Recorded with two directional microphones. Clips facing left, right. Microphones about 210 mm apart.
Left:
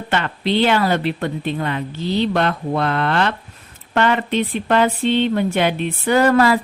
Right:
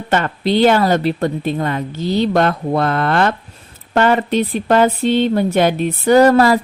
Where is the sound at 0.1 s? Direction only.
45° right (ahead or behind).